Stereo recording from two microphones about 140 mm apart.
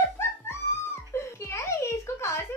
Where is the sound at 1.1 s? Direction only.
20° left (ahead or behind).